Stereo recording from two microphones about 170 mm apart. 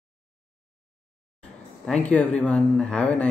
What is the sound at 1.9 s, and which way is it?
Speech, 5° left (ahead or behind).